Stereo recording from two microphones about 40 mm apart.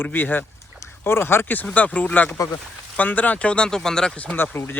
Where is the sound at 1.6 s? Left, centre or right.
Left.